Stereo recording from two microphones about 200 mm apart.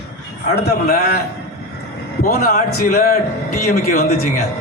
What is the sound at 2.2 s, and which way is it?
A man's voice, 45° left (ahead or behind).